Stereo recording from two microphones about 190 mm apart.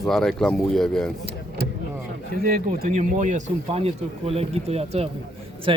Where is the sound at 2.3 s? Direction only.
50° right (ahead or behind); by 5.8 s 25° right (ahead or behind).